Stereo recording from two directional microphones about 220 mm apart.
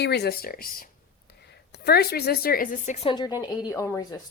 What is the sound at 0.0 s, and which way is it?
A woman's voice, 50° left (ahead or behind).